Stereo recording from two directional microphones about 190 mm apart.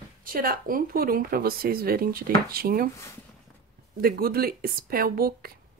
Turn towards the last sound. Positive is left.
turn(degrees=-50)  # may be behind; listen again after turning